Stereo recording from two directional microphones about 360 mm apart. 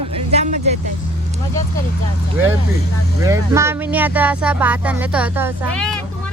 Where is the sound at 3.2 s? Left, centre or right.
Centre.